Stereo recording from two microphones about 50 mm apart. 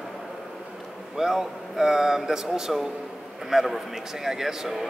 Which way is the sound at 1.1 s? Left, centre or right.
Centre.